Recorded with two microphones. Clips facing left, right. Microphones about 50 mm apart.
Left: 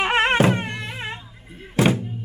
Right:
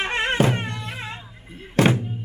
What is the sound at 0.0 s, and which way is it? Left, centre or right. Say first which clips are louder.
Music: left 5 dB; left.